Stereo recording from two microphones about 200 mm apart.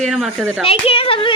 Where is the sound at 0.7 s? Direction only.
30° left (ahead or behind).